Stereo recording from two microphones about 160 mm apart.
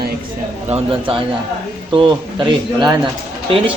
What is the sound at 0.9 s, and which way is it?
A man's voice, 35° right (ahead or behind).